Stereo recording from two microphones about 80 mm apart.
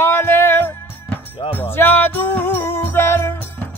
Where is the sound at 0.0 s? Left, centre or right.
Left.